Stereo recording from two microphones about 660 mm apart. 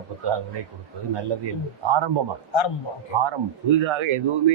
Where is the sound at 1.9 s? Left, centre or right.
Right.